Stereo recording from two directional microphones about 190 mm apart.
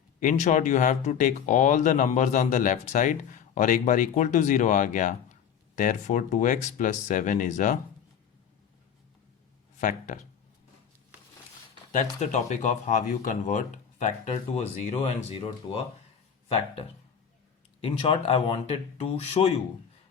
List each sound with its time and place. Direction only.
0.2 s speech: 40° left (ahead or behind)
9.7 s speech: 40° left (ahead or behind)
11.7 s speech: 40° left (ahead or behind)
17.7 s speech: 30° left (ahead or behind)